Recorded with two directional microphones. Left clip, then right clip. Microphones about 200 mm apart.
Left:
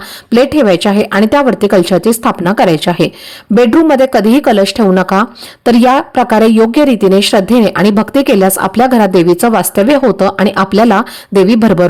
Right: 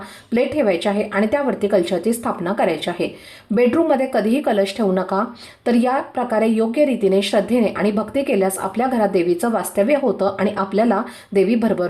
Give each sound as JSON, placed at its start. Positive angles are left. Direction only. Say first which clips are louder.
{"t": 0.3, "sound": "speech", "louder": "left 10 dB", "side_deg": 45}